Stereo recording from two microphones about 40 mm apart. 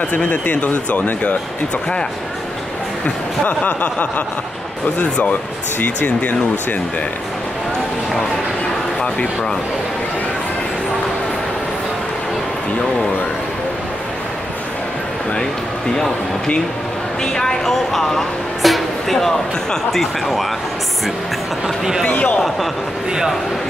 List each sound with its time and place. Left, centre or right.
0.1 s speech: left
3.4 s speech: left
5.8 s speech: left
17.2 s speech: centre
17.9 s speech: centre